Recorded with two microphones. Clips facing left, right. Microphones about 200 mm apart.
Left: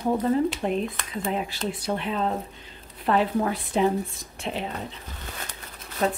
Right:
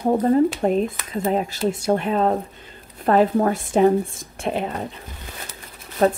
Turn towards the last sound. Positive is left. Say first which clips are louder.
# right 7 dB
turn(degrees=-45)  # may be behind; listen again after turning